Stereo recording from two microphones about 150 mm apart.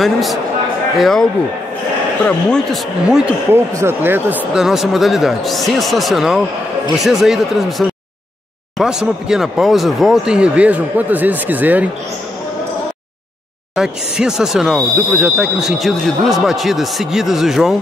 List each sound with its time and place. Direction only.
0.0 s speech: centre (ahead or behind)
2.2 s speech: 5° left (ahead or behind)
3.7 s speech: 15° right (ahead or behind)
13.7 s speech: 5° right (ahead or behind)